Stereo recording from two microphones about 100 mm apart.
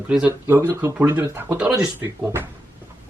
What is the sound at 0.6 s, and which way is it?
Speech, 25° right (ahead or behind).